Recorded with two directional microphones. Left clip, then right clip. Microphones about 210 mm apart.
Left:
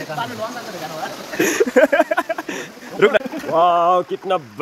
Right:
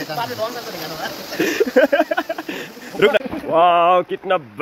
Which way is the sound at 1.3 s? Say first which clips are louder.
Left 1 dB; 15° left (ahead or behind).